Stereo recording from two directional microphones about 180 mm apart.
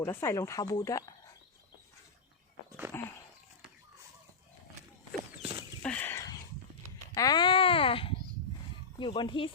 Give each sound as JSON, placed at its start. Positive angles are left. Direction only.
{"t": 0.0, "sound": "speech", "side_deg": 15}
{"t": 2.9, "sound": "a sound", "side_deg": 10}
{"t": 5.4, "sound": "horse", "side_deg": -30}
{"t": 5.8, "sound": "a sound", "side_deg": 5}
{"t": 7.1, "sound": "babbling", "side_deg": 20}
{"t": 9.0, "sound": "speech", "side_deg": 25}